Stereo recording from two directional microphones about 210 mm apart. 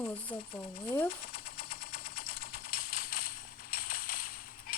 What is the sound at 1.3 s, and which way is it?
Machine gun, 45° left (ahead or behind).